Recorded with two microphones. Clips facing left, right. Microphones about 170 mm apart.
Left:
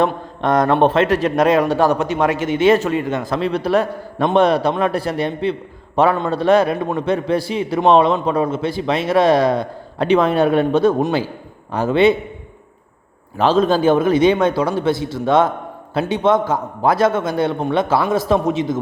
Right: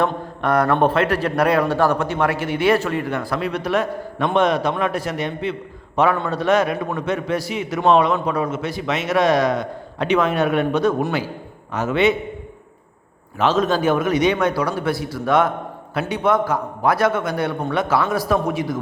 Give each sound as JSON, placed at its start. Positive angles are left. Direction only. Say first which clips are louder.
{"t": 0.0, "sound": "a man's voice", "louder": "left 3 dB", "side_deg": 20}
{"t": 13.4, "sound": "a man's voice", "louder": "left 4 dB", "side_deg": 30}